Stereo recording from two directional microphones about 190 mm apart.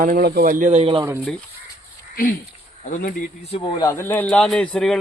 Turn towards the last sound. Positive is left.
turn(degrees=0)  # may be behind; listen again after turning